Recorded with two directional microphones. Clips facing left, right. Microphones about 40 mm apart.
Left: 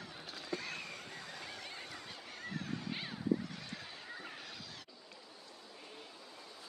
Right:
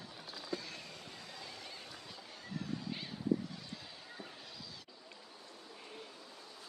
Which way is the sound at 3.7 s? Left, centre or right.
Left.